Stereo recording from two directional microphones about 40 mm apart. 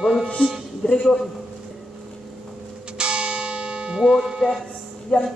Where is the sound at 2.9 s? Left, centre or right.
Right.